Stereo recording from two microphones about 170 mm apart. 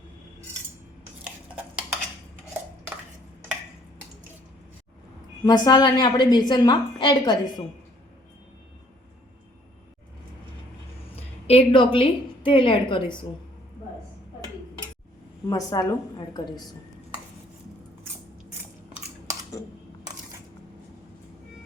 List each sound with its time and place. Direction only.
1.2 s cutlery: 5° right (ahead or behind)
5.5 s a woman's voice: 25° left (ahead or behind)
11.4 s a woman's voice: 30° left (ahead or behind)
15.4 s a woman's voice: 20° left (ahead or behind)